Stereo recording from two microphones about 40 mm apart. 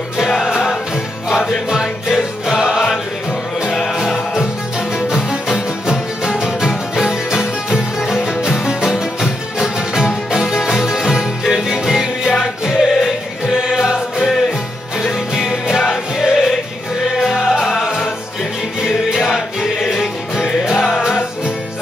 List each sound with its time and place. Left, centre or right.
1.3 s music: centre
3.9 s music: centre
19.3 s music: centre